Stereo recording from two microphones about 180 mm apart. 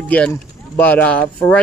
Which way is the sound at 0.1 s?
10° left (ahead or behind).